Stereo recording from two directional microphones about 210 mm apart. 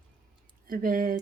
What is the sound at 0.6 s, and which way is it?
Speech, 40° right (ahead or behind).